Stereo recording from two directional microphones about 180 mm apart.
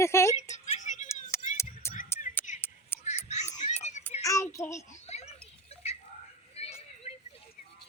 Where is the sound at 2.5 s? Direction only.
45° left (ahead or behind).